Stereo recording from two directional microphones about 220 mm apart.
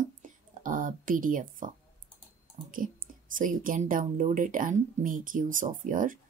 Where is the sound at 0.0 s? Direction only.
35° right (ahead or behind).